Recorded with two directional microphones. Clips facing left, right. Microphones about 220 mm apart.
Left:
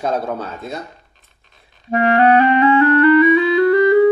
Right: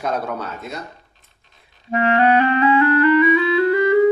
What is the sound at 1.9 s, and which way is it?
Speech, 40° left (ahead or behind).